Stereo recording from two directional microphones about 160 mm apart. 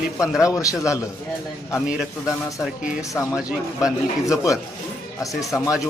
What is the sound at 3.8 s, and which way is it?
Speech, 5° right (ahead or behind).